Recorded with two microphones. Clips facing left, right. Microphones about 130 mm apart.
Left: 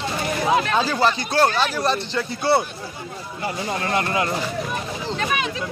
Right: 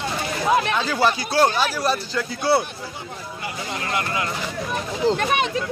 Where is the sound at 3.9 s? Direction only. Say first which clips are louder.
Left 3 dB; 30° left (ahead or behind).